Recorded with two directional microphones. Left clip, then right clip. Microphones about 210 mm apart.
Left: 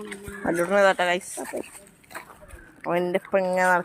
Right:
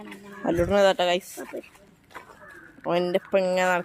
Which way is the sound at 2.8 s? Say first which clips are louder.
Even; 20° right (ahead or behind).